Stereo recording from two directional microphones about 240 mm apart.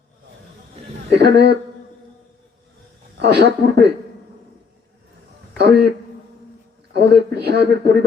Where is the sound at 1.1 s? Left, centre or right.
Right.